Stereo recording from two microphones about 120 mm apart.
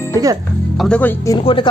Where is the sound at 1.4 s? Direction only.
45° left (ahead or behind).